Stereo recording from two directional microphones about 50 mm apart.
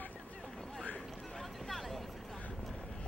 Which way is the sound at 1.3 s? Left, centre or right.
Centre.